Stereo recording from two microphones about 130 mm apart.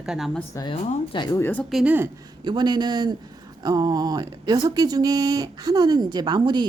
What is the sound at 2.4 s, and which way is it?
Speech, 35° right (ahead or behind).